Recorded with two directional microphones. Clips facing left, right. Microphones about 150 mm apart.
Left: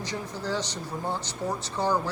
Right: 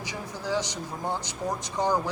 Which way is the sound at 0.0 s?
10° right (ahead or behind).